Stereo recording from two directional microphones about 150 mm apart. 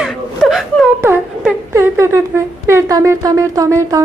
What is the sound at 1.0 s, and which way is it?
Speech, 15° right (ahead or behind).